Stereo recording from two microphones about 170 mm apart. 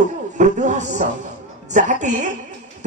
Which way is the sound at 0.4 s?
45° right (ahead or behind).